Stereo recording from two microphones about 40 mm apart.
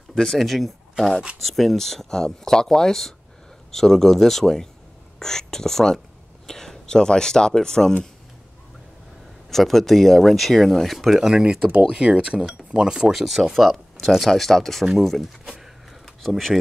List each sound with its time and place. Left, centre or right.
0.1 s speech: centre
9.5 s speech: centre
11.1 s speech: centre
13.1 s speech: centre